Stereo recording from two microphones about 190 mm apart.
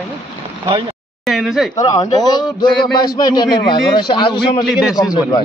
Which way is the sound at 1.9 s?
20° left (ahead or behind).